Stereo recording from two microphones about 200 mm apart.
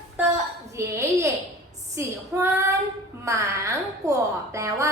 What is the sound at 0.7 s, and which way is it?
A woman's voice, 15° right (ahead or behind).